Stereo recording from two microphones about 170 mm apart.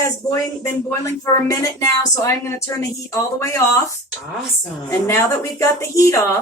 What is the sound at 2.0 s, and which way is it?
A woman's voice, 15° left (ahead or behind).